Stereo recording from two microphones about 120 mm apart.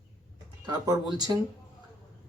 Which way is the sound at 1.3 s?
25° right (ahead or behind).